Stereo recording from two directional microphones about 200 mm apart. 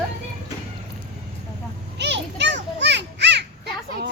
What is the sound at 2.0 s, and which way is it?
Children playing, 60° right (ahead or behind).